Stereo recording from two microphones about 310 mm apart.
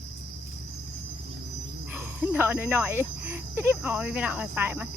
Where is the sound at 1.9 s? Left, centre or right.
Centre.